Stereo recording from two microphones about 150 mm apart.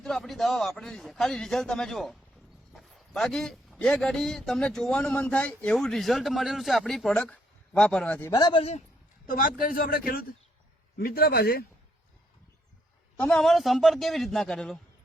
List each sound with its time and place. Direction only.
0.0 s speech: centre (ahead or behind)
8.2 s speech: 25° left (ahead or behind)
9.2 s a man's voice: 65° left (ahead or behind); by 11.6 s 90° left
13.1 s speech: 5° left (ahead or behind)